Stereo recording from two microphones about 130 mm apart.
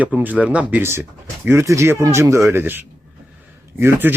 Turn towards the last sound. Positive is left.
turn(degrees=-15)  # may be behind; listen again after turning